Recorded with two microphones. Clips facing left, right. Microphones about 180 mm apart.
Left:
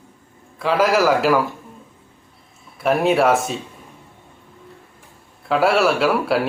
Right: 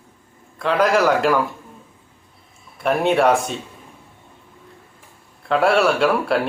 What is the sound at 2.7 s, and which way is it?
Speech, centre (ahead or behind).